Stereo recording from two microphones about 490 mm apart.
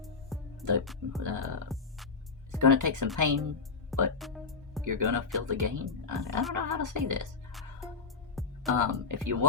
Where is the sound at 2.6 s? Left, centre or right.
Right.